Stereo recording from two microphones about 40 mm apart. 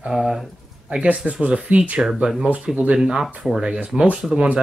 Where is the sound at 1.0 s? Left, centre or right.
Right.